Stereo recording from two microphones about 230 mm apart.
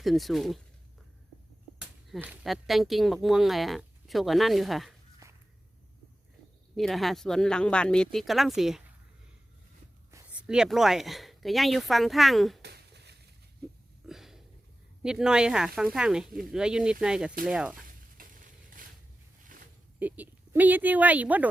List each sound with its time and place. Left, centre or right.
0.0 s speech: centre
1.8 s speech: centre
5.2 s walk: centre
6.7 s speech: centre
10.1 s speech: centre
12.6 s a sound: right
14.1 s a sound: centre
15.0 s speech: centre
18.2 s a sound: right
20.0 s speech: centre